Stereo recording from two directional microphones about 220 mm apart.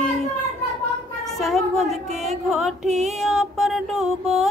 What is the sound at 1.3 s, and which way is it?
Music, centre (ahead or behind).